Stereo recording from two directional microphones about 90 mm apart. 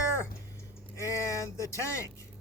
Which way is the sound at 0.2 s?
30° left (ahead or behind).